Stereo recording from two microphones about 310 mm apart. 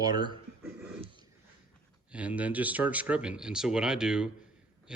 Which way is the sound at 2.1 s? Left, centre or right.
Centre.